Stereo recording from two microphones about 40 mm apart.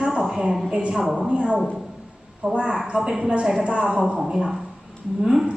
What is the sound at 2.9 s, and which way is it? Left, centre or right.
Speech, centre.